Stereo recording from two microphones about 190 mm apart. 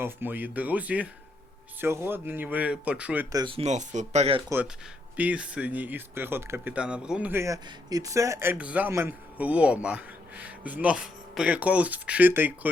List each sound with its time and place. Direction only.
0.0 s speech: 10° right (ahead or behind)
3.3 s speech: 25° right (ahead or behind)
4.4 s speech: 10° right (ahead or behind)